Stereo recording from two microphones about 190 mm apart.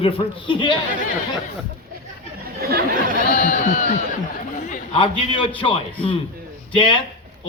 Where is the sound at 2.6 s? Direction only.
55° right (ahead or behind).